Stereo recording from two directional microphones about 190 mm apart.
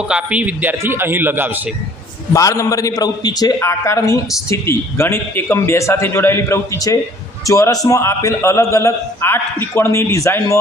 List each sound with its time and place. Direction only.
0.1 s a man's voice: 5° right (ahead or behind)
2.3 s a man's voice: 15° left (ahead or behind)